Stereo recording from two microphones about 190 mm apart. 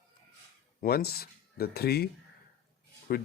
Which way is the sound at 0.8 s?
55° left (ahead or behind).